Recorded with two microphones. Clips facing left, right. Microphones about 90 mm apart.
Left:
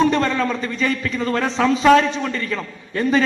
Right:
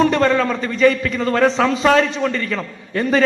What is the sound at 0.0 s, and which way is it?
A man's voice, 35° right (ahead or behind).